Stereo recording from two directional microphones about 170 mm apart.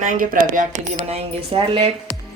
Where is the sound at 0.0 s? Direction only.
55° right (ahead or behind); by 1.9 s 35° right (ahead or behind).